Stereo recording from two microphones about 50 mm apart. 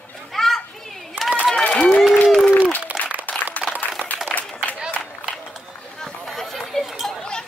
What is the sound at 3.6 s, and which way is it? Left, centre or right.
Applause, centre.